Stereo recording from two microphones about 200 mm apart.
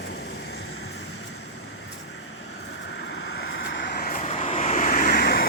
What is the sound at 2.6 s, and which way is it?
Vehicle, 60° left (ahead or behind).